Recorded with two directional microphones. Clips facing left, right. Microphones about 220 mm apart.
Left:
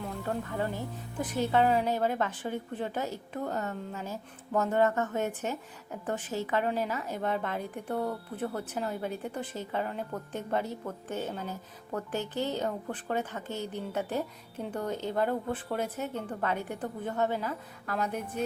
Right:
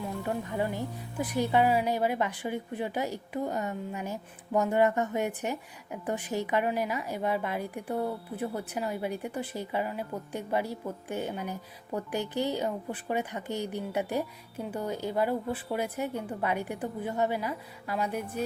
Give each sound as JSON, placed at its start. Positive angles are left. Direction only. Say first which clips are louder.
{"t": 0.2, "sound": "speech", "louder": "right 1 dB", "side_deg": -15}